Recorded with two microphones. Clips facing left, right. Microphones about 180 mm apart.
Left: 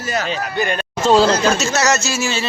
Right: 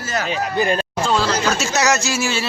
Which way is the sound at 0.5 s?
30° right (ahead or behind).